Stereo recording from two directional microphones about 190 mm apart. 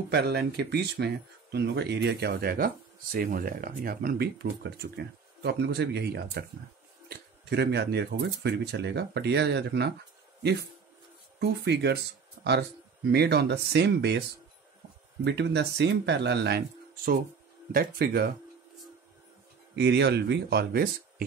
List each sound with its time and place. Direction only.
0.1 s speech: 60° right (ahead or behind)
11.3 s speech: 60° right (ahead or behind)
13.1 s speech: 60° right (ahead or behind)
15.2 s speech: 65° right (ahead or behind)
19.7 s speech: 65° right (ahead or behind)